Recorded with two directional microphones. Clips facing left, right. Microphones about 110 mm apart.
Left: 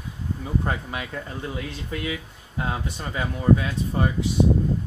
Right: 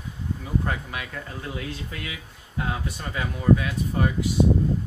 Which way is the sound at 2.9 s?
25° left (ahead or behind).